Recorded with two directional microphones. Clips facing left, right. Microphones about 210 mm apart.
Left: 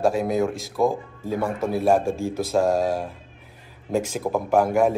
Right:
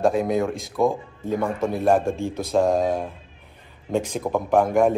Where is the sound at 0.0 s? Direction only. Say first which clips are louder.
Right 1 dB; centre (ahead or behind).